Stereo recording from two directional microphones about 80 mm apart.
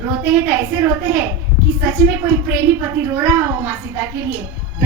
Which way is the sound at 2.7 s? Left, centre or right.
Right.